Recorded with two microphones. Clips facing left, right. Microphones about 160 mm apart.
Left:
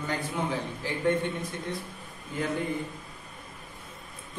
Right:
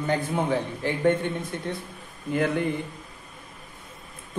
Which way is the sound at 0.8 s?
55° right (ahead or behind).